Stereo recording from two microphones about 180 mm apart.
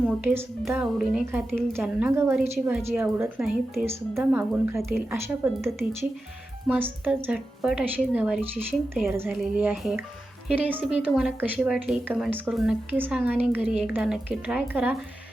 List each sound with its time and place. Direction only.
0.0 s a woman's voice: 10° right (ahead or behind)